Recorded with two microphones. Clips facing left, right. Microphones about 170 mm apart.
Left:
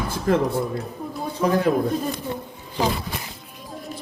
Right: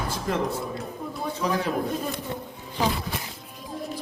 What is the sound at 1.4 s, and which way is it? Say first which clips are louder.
Speech: left 7 dB; 50° left (ahead or behind).